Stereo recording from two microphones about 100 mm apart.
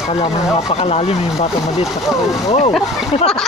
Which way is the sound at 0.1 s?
65° left (ahead or behind).